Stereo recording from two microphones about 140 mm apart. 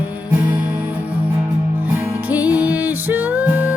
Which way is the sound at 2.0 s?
10° right (ahead or behind).